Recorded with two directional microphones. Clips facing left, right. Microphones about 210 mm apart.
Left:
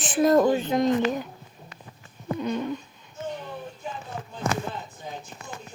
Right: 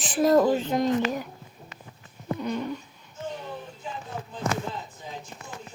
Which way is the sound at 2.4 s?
20° left (ahead or behind).